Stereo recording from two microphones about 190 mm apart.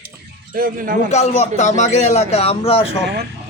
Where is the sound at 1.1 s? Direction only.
35° left (ahead or behind).